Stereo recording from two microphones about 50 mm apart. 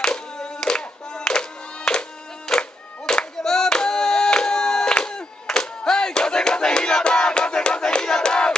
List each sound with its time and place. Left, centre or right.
0.0 s hands: centre
1.9 s music: centre